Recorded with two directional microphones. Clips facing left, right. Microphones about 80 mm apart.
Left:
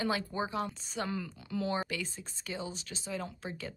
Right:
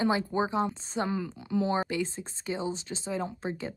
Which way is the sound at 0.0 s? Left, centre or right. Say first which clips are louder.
Right 6 dB; right.